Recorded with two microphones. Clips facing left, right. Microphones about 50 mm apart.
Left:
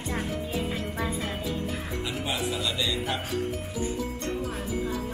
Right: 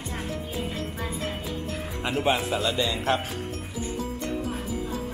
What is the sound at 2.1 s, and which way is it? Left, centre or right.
Speech, right.